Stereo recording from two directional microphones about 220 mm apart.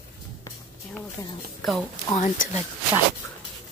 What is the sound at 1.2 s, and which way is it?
Speech, 15° left (ahead or behind).